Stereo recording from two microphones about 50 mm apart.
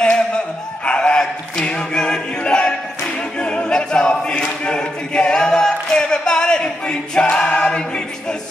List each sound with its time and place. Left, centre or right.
0.8 s choir: centre
3.3 s a capella: left